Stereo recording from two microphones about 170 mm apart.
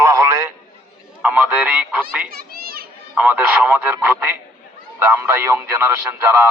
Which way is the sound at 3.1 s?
10° right (ahead or behind).